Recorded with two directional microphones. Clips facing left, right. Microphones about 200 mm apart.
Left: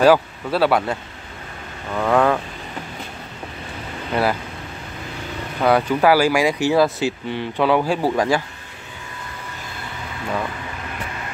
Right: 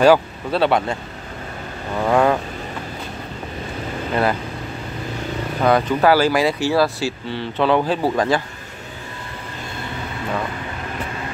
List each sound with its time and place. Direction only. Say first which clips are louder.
0.0 s speech: right 1 dB; 5° left (ahead or behind)
2.0 s speech: right 1 dB; 10° right (ahead or behind)
4.1 s speech: even; 5° left (ahead or behind)
5.6 s speech: even; 10° left (ahead or behind)